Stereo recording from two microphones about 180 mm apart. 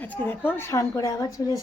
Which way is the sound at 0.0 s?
10° left (ahead or behind).